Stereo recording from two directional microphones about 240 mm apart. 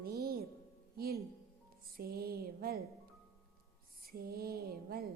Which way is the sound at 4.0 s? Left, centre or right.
Right.